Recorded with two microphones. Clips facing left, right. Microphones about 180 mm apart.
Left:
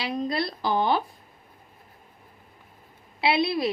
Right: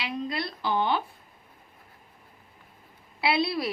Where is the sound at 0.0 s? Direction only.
35° left (ahead or behind).